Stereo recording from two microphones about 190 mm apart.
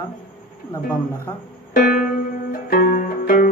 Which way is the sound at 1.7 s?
50° left (ahead or behind).